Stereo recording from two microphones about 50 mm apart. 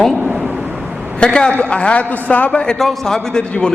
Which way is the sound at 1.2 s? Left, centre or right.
Centre.